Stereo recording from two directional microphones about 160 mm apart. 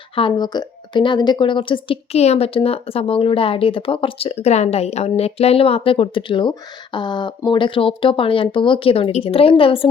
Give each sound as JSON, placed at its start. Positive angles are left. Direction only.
{"t": 0.2, "sound": "a woman's voice", "side_deg": 30}